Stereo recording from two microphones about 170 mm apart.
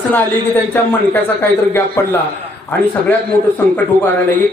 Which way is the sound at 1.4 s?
15° left (ahead or behind).